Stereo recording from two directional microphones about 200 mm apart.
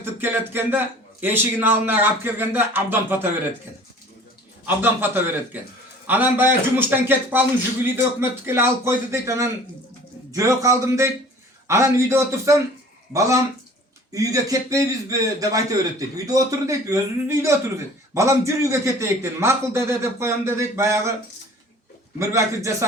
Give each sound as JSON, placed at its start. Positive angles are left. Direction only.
{"t": 0.0, "sound": "a man's voice", "side_deg": -10}
{"t": 4.6, "sound": "a man's voice", "side_deg": -10}
{"t": 22.2, "sound": "a man's voice", "side_deg": -15}